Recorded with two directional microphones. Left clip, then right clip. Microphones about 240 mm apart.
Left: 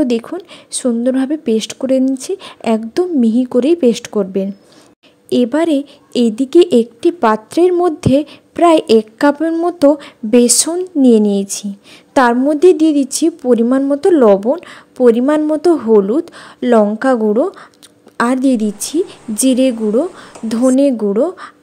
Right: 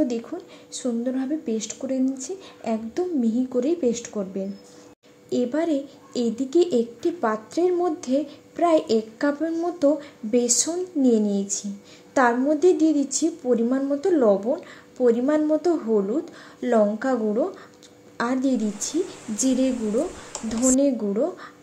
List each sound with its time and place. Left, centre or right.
0.0 s speech: left